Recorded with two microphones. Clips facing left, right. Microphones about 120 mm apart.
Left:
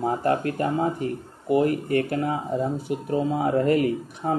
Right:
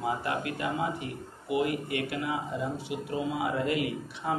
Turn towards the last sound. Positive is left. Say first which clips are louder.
# left 8 dB
turn(degrees=45)  # may be behind; listen again after turning